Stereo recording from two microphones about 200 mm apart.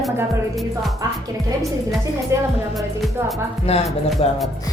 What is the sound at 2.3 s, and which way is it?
Speech, 15° right (ahead or behind).